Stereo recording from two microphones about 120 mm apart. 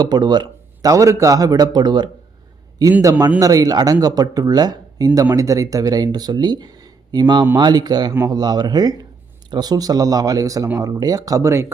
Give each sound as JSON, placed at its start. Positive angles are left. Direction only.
{"t": 0.0, "sound": "speech", "side_deg": -35}